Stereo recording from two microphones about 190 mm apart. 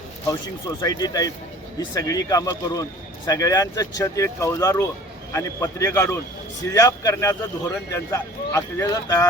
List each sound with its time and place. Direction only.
0.8 s speech: 20° left (ahead or behind)